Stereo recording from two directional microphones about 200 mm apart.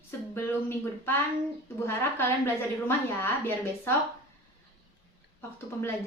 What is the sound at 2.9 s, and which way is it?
Speech, 10° left (ahead or behind).